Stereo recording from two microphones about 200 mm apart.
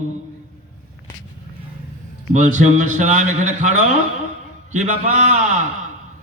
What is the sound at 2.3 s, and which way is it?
A man's voice, 35° right (ahead or behind).